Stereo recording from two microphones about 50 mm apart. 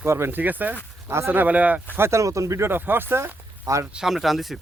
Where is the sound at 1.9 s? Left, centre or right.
Right.